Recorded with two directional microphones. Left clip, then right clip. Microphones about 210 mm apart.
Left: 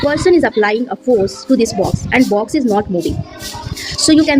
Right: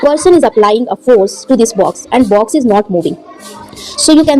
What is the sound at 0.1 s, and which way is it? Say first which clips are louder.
A woman's voice: right 4 dB; 20° right (ahead or behind).